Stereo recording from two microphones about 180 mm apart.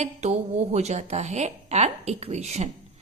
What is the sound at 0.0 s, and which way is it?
A woman's voice, 40° right (ahead or behind).